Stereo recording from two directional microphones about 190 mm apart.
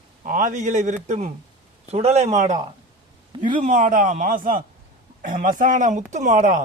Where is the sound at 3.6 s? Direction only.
45° right (ahead or behind).